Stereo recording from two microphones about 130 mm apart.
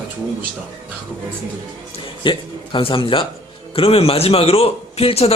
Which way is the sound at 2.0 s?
40° left (ahead or behind).